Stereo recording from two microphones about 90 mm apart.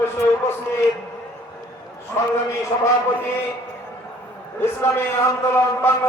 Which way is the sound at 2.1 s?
30° left (ahead or behind).